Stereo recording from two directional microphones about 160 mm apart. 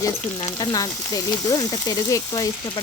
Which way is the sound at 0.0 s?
25° left (ahead or behind).